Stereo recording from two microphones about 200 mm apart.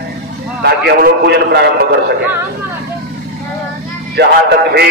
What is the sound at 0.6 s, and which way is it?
A man's voice, 50° right (ahead or behind).